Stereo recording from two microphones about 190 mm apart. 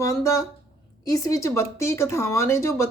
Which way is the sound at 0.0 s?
15° left (ahead or behind).